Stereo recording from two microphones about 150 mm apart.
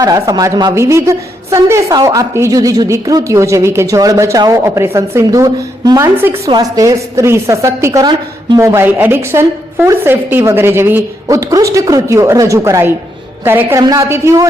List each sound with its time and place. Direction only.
0.0 s a woman's voice: 25° right (ahead or behind)
6.1 s a woman's voice: 15° right (ahead or behind)
6.5 s a woman's voice: 25° right (ahead or behind)